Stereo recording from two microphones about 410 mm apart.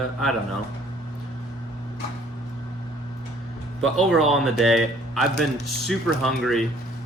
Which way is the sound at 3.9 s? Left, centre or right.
Centre.